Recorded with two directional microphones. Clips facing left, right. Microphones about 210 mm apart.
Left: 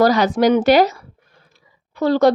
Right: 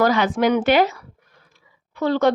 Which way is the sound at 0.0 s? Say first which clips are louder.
Left 4 dB; 40° left (ahead or behind).